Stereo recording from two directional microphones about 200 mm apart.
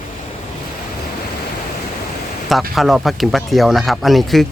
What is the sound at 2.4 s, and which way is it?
Speech, centre (ahead or behind).